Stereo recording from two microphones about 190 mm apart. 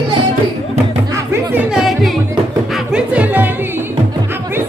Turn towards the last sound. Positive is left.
turn(degrees=-5)  # may be behind; listen again after turning